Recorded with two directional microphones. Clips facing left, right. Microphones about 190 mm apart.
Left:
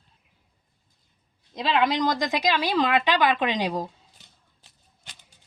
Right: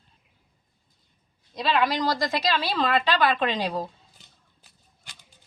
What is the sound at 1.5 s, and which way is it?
A woman's voice, 20° left (ahead or behind).